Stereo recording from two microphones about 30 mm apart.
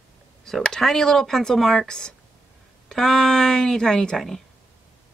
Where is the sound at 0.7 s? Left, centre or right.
Centre.